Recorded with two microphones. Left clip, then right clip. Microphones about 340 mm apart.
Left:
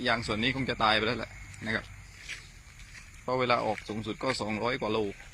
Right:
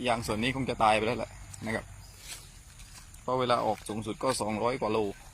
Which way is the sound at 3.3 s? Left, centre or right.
Centre.